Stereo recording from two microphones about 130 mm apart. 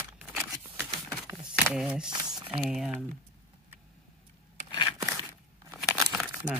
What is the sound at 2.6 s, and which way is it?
Speech, 5° right (ahead or behind).